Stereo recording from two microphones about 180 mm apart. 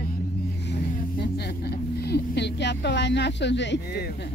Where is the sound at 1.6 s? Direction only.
65° left (ahead or behind).